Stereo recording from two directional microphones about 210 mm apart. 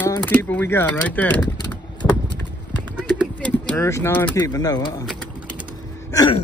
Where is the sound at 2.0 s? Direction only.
5° left (ahead or behind).